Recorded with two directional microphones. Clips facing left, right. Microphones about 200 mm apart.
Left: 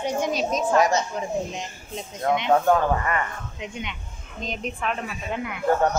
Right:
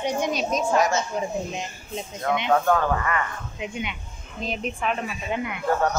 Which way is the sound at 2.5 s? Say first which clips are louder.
Left 1 dB; 20° left (ahead or behind).